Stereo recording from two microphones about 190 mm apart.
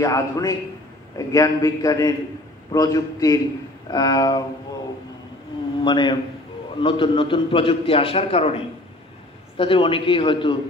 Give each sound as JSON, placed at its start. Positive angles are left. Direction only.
{"t": 0.0, "sound": "a man's voice", "side_deg": 15}
{"t": 5.9, "sound": "a man's voice", "side_deg": 25}
{"t": 9.6, "sound": "a man's voice", "side_deg": 25}